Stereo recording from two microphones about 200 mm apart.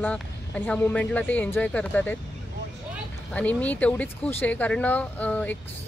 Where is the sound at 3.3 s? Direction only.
5° left (ahead or behind).